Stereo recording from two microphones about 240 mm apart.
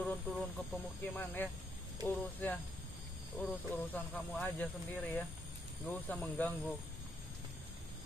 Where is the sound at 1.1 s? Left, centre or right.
Centre.